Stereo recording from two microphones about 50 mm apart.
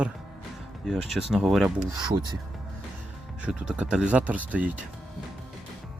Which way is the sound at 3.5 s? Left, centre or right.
Centre.